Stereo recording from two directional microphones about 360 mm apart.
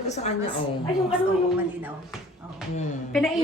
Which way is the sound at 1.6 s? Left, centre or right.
Centre.